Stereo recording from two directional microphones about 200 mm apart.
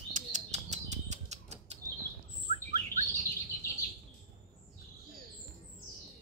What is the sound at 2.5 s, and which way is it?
Bird, 30° right (ahead or behind).